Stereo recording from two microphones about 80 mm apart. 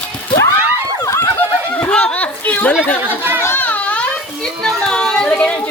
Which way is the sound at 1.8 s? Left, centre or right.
Centre.